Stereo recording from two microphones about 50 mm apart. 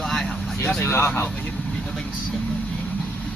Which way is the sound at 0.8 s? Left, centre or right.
Left.